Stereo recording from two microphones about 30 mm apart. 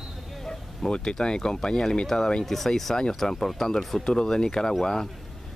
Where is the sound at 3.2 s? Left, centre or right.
Centre.